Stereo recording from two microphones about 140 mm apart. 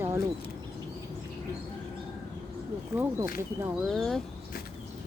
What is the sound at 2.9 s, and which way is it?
Speech, 15° right (ahead or behind).